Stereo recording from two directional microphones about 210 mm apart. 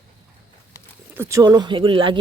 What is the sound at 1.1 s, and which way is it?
Speech, 15° right (ahead or behind).